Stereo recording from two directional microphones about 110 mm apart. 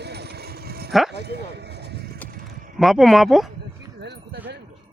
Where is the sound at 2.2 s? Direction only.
15° left (ahead or behind).